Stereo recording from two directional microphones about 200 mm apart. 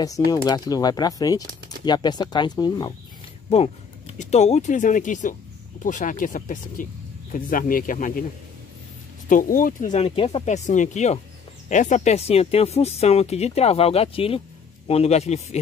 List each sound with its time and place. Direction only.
0.0 s speech: 20° left (ahead or behind); by 8.3 s 45° left (ahead or behind)
9.3 s speech: 45° left (ahead or behind)